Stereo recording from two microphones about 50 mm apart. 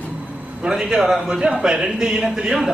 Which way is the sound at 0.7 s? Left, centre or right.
Centre.